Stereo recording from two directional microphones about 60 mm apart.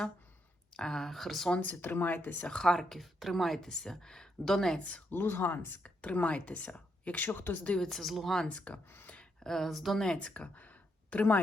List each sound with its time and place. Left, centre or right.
0.7 s speech: centre
1.5 s speech: left
2.5 s speech: centre
4.8 s speech: left
5.1 s speech: left
5.8 s speech: left
7.8 s speech: centre
8.4 s speech: left
9.4 s speech: centre
10.2 s speech: centre